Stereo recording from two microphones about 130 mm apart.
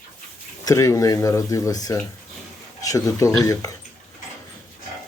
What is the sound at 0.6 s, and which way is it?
Speech, 25° left (ahead or behind).